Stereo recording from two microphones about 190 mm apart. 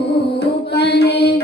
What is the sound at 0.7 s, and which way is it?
Mantra, 60° left (ahead or behind).